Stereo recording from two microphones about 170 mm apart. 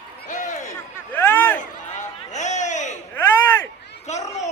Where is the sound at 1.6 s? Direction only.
45° left (ahead or behind).